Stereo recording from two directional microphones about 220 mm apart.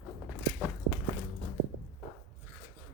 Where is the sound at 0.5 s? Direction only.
Centre (ahead or behind).